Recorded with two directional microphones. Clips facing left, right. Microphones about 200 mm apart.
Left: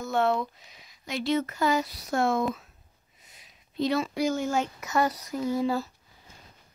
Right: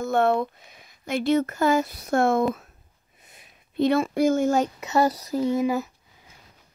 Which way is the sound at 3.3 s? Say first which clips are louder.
Right 4 dB; 55° right (ahead or behind).